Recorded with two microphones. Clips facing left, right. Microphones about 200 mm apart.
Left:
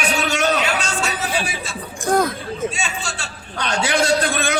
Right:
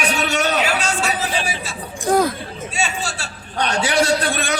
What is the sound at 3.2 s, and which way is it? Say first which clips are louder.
A man's voice: right 4 dB; 35° right (ahead or behind).